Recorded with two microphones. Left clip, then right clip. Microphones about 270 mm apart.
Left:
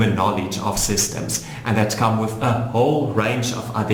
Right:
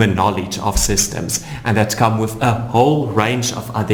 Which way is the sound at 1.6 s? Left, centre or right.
Right.